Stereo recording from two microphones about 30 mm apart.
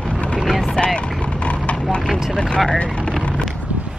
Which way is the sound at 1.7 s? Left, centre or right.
Left.